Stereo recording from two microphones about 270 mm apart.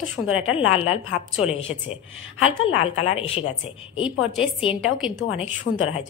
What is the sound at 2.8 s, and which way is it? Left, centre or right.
Speech, left.